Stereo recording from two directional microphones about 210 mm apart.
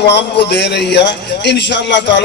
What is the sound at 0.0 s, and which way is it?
A man's voice, 55° left (ahead or behind).